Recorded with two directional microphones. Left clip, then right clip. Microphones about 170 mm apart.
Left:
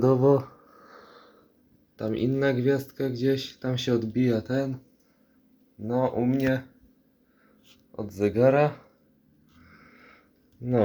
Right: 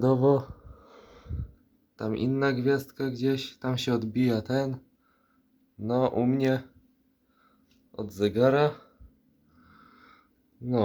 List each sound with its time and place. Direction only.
0.0 s speech: 5° right (ahead or behind)
2.0 s speech: 20° right (ahead or behind)
5.9 s speech: 25° right (ahead or behind)
8.2 s speech: 10° right (ahead or behind)
10.6 s speech: 5° right (ahead or behind)